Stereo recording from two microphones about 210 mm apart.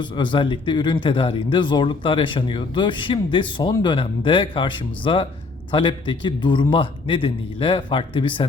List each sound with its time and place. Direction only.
0.0 s speech: 20° left (ahead or behind)